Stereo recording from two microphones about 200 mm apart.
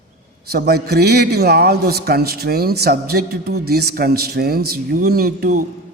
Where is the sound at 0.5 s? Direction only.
50° right (ahead or behind).